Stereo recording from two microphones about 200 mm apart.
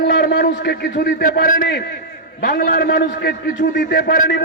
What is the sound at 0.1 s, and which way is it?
A man's voice, 55° left (ahead or behind).